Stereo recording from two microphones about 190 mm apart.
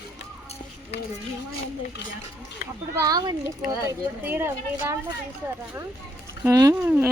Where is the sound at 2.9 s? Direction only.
20° right (ahead or behind).